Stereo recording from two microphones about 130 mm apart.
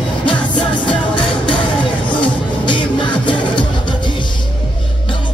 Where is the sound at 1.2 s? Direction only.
10° left (ahead or behind).